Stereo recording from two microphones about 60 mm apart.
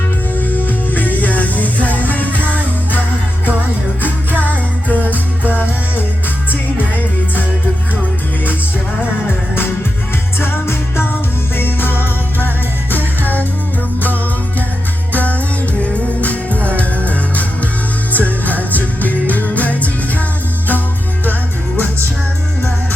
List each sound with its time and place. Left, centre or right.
0.3 s music: left
4.0 s music: left
10.4 s music: left
15.1 s music: left